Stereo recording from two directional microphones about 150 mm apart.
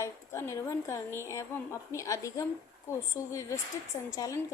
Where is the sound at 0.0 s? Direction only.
20° left (ahead or behind).